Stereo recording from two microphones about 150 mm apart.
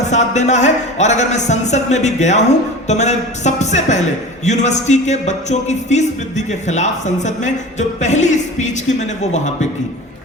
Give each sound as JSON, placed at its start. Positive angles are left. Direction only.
{"t": 0.0, "sound": "speech", "side_deg": 50}